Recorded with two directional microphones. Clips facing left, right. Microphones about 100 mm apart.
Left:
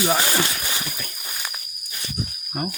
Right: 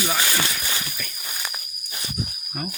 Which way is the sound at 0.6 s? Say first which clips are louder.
Left 1 dB; 15° left (ahead or behind).